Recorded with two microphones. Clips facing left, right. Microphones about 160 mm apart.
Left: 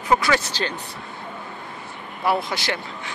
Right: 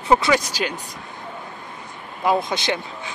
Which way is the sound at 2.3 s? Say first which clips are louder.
Right 2 dB; 20° right (ahead or behind).